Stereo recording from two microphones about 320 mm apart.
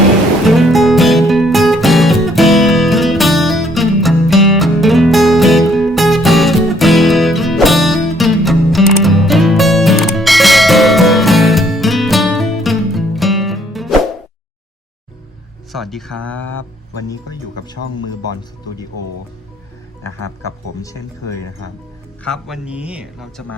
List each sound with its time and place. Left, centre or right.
0.4 s music: centre
15.7 s a sound: centre
22.2 s speech: centre